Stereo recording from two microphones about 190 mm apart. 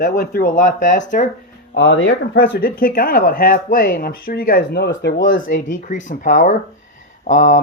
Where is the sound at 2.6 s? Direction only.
50° left (ahead or behind).